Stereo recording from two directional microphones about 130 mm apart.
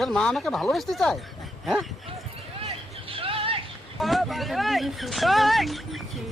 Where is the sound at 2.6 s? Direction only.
45° right (ahead or behind).